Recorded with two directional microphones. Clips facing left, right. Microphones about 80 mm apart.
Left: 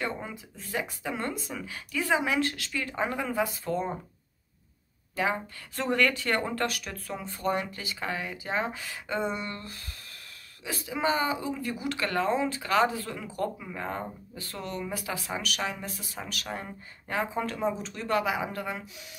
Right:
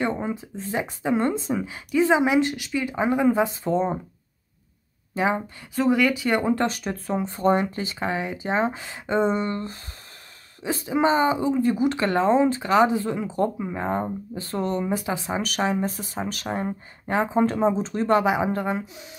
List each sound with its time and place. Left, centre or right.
0.0 s speech: right
5.1 s speech: right
5.8 s speech: centre; by 19.0 s right